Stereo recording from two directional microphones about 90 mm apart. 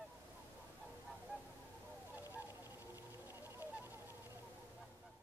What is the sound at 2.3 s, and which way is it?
Goose, 25° right (ahead or behind).